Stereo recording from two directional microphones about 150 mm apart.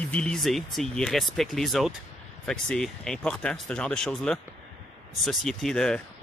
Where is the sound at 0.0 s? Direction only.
10° left (ahead or behind).